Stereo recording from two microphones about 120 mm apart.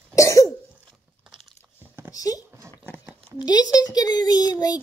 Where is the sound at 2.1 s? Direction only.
30° left (ahead or behind).